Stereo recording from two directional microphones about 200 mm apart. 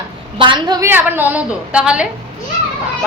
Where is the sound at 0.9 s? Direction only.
10° right (ahead or behind).